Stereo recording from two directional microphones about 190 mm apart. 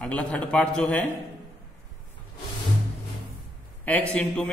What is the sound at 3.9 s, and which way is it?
Speech, 5° left (ahead or behind).